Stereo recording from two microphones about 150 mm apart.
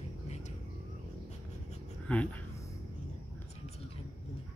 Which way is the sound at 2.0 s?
10° left (ahead or behind).